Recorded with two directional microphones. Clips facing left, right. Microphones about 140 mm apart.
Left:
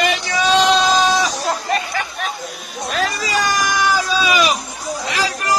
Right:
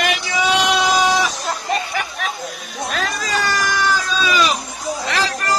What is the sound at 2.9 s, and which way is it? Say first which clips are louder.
Speech: left 4 dB; centre (ahead or behind).